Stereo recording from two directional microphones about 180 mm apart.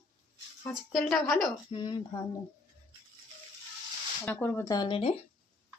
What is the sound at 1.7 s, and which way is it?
Speech, 25° left (ahead or behind).